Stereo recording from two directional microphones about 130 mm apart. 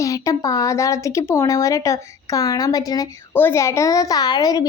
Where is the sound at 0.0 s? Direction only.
25° left (ahead or behind).